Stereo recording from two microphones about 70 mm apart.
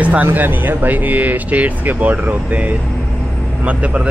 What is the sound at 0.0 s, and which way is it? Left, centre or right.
Speech, right.